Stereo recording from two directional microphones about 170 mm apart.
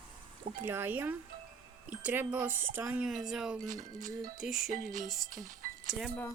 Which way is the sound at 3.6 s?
50° right (ahead or behind).